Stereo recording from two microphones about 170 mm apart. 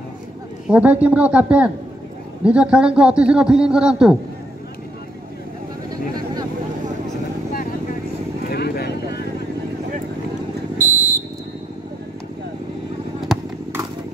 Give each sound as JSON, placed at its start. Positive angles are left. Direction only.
{"t": 0.7, "sound": "a man's voice", "side_deg": -5}
{"t": 8.5, "sound": "vehicle", "side_deg": 65}
{"t": 10.8, "sound": "vehicle", "side_deg": -45}